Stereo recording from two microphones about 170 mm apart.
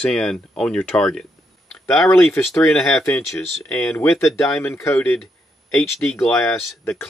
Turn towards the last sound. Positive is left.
turn(degrees=5)  # may be behind; listen again after turning